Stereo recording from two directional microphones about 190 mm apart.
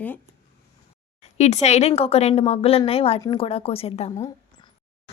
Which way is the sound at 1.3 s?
35° left (ahead or behind).